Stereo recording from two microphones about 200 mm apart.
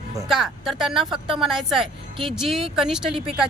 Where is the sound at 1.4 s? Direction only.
Centre (ahead or behind).